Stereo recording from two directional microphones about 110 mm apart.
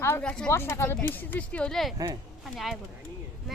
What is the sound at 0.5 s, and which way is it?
Speech, 25° left (ahead or behind).